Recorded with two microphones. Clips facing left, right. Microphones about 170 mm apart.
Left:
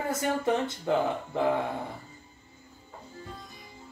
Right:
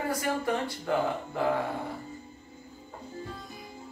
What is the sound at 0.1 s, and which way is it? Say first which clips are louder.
Speech: left 4 dB; 20° left (ahead or behind).